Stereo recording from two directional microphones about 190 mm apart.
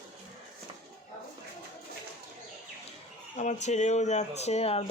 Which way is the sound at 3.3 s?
40° left (ahead or behind).